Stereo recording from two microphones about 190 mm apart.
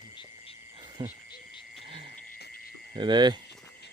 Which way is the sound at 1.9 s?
30° right (ahead or behind).